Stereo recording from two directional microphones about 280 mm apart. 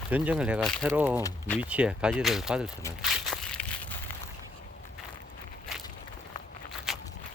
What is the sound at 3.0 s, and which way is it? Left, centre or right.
Crushing, centre.